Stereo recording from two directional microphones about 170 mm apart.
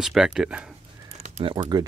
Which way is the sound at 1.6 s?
25° right (ahead or behind).